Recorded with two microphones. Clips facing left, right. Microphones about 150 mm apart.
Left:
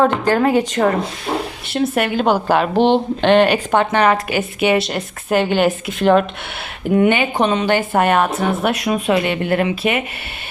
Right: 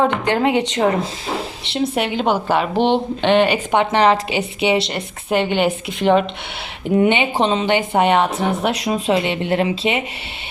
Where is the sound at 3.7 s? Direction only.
20° right (ahead or behind).